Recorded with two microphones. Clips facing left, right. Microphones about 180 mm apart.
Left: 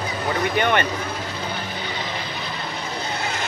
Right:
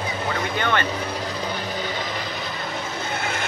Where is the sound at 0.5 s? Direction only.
15° left (ahead or behind).